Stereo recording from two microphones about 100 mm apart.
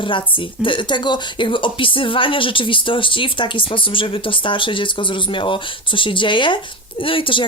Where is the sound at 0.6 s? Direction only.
55° left (ahead or behind).